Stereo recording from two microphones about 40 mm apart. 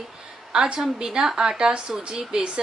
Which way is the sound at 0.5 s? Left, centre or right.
Centre.